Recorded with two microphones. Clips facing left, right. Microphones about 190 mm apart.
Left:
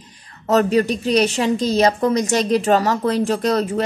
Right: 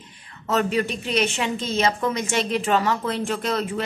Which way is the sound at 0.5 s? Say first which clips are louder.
Left 6 dB; 40° left (ahead or behind).